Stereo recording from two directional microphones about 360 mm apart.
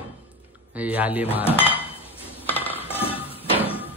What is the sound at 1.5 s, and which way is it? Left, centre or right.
Dishes, centre.